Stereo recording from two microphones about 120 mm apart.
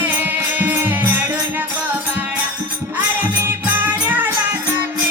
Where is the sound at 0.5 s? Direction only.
15° right (ahead or behind).